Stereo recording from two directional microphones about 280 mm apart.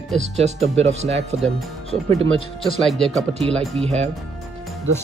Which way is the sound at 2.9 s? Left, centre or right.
Centre.